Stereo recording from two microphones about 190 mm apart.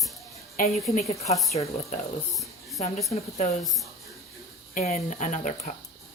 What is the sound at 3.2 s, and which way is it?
Speech, 35° left (ahead or behind).